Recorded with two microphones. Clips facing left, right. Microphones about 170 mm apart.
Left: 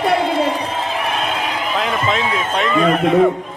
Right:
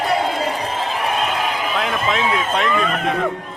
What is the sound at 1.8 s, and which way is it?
Speech, centre (ahead or behind).